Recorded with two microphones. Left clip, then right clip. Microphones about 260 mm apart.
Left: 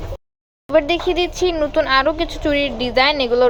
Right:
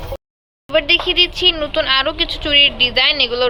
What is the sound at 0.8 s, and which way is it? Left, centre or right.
A woman's voice, centre.